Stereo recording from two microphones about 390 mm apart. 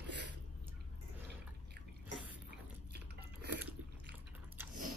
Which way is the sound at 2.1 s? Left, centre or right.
Centre.